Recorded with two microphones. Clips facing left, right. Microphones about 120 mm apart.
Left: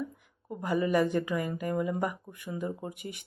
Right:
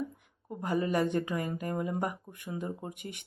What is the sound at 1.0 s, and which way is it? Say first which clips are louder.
Speech: left 1 dB; 30° right (ahead or behind).